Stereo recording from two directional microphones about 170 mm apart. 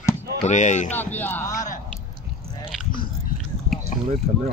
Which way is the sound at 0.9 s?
10° left (ahead or behind).